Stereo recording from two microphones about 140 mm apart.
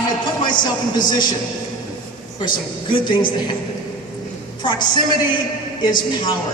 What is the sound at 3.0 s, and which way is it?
Speech, 35° left (ahead or behind).